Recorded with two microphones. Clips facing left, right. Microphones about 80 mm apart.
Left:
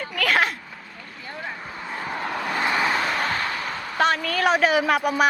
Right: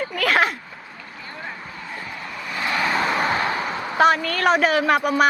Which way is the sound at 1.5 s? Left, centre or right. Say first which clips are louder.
Left 2 dB; centre.